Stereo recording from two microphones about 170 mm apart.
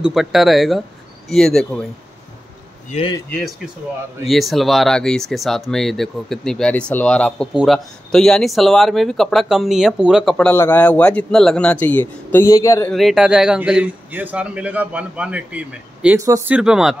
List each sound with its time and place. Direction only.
0.0 s speech: centre (ahead or behind)
2.9 s a man's voice: 30° left (ahead or behind)
3.3 s speech: 5° left (ahead or behind)
12.9 s a man's voice: centre (ahead or behind)
16.5 s speech: 5° right (ahead or behind)